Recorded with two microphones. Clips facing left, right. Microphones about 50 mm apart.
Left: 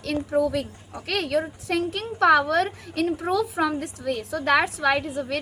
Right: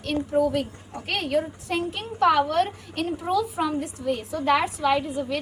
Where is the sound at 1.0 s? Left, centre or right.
Left.